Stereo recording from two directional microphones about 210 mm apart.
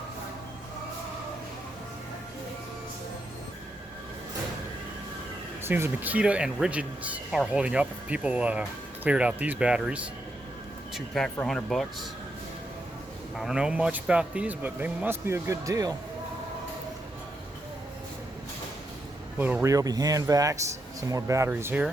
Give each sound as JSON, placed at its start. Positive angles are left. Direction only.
{"t": 5.6, "sound": "speech", "side_deg": -10}
{"t": 13.3, "sound": "speech", "side_deg": 0}
{"t": 19.4, "sound": "speech", "side_deg": -10}